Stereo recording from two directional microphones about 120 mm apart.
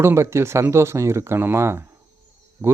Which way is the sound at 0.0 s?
20° right (ahead or behind).